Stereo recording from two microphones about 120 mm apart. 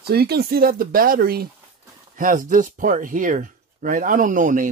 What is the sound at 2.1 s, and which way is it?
Speech, 90° right.